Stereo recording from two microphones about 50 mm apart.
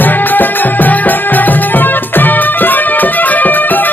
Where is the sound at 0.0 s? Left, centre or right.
Left.